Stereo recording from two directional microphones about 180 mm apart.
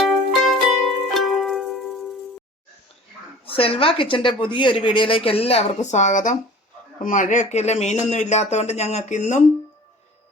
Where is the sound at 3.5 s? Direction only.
30° left (ahead or behind).